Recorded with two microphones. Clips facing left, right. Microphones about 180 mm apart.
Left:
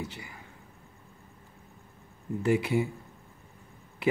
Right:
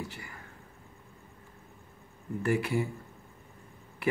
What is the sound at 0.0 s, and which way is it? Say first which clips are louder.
Speech: left 2 dB; 20° left (ahead or behind).